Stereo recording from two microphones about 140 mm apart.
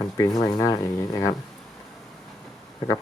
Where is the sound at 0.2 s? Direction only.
30° left (ahead or behind).